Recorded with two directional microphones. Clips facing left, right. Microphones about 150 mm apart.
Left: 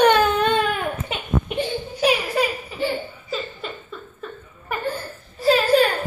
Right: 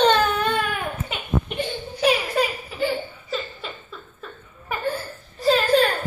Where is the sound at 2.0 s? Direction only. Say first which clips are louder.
Even; 5° left (ahead or behind).